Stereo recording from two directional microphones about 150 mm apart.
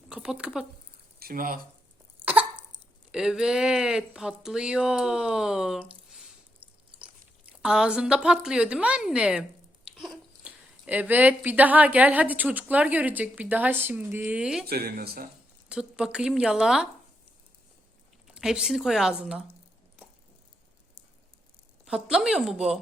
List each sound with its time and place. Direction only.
0.1 s speech: 5° right (ahead or behind)
1.2 s speech: 70° right (ahead or behind)
2.2 s cough: 10° right (ahead or behind)
3.1 s speech: 5° right (ahead or behind)
7.6 s speech: 5° right (ahead or behind)
14.7 s speech: 85° right
15.7 s speech: 5° right (ahead or behind)
18.3 s speech: 5° right (ahead or behind)
21.8 s speech: 5° right (ahead or behind)